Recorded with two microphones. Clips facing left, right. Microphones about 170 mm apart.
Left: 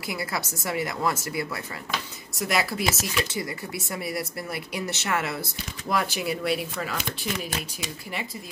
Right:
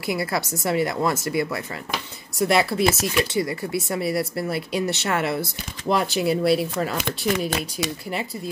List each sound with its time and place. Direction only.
0.0 s speech: 30° right (ahead or behind)
7.1 s speech: 75° right (ahead or behind)